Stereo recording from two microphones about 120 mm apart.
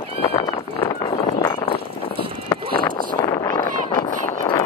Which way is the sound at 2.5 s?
35° left (ahead or behind).